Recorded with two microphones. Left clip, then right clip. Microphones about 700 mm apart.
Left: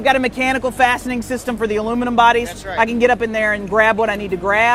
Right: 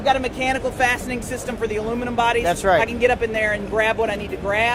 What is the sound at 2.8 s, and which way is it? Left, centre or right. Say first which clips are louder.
A man's voice: left 4 dB; left.